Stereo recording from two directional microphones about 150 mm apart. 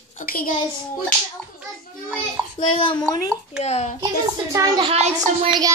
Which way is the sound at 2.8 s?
30° left (ahead or behind).